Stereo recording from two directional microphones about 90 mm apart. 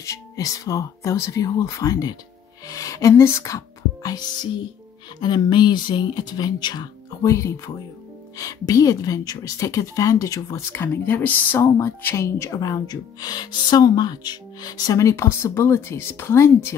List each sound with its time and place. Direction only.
0.0 s speech: 40° left (ahead or behind); by 6.9 s 55° left (ahead or behind)
7.2 s speech: 35° left (ahead or behind)
10.7 s speech: 25° left (ahead or behind)